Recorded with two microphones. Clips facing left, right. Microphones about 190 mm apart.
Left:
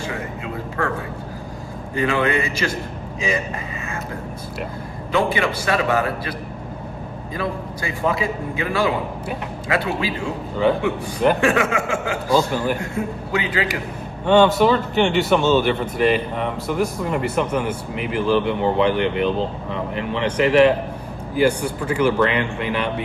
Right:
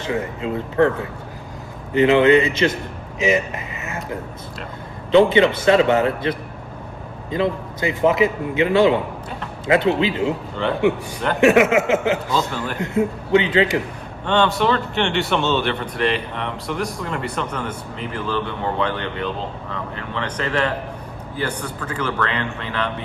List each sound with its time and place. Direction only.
1.9 s a man's voice: 20° right (ahead or behind)
5.1 s a man's voice: 25° right (ahead or behind)
7.3 s a man's voice: 20° right (ahead or behind)
14.3 s speech: 5° left (ahead or behind)